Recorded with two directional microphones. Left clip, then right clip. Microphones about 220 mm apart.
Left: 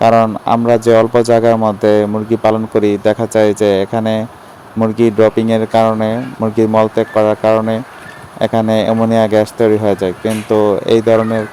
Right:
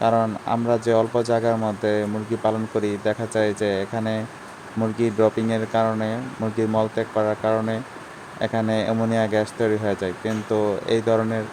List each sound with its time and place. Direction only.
0.0 s speech: 35° left (ahead or behind)